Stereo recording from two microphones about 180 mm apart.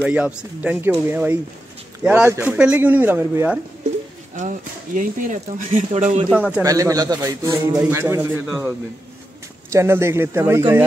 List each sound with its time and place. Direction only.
0.0 s a man's voice: 5° right (ahead or behind)
4.4 s speech: 45° right (ahead or behind)
6.2 s a man's voice: 5° right (ahead or behind)
6.6 s a man's voice: 20° right (ahead or behind)